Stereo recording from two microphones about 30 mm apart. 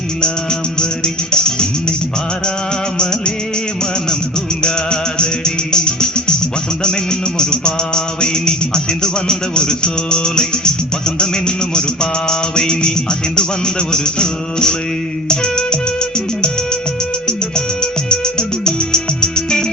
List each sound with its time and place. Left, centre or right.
0.8 s music: left
3.0 s music: left
4.6 s music: left